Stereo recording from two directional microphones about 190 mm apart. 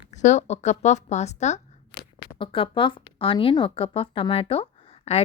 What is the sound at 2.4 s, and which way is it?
A woman's voice, 25° left (ahead or behind).